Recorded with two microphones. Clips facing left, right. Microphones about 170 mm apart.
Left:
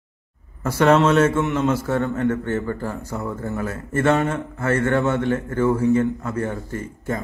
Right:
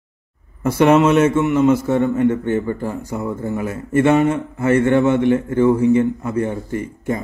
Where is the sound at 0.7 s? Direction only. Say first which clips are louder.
Right 3 dB; 15° right (ahead or behind).